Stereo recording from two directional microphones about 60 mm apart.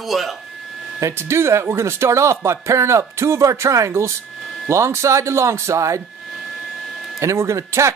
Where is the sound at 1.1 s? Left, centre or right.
Right.